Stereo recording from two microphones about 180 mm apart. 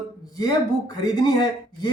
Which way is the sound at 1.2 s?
25° left (ahead or behind).